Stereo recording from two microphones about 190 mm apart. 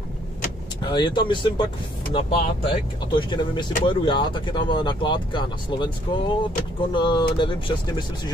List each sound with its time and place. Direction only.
0.8 s speech: 25° left (ahead or behind)